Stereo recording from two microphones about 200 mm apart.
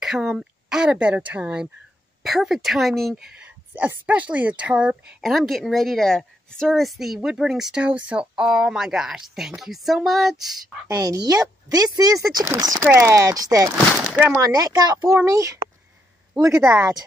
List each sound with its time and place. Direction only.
0.0 s speech: centre (ahead or behind)
10.9 s speech: 20° right (ahead or behind)
14.5 s speech: 20° right (ahead or behind)